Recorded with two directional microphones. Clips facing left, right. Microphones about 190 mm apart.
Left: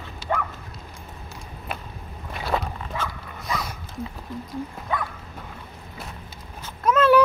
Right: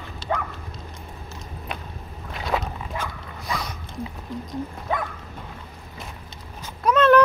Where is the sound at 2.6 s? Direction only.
10° right (ahead or behind).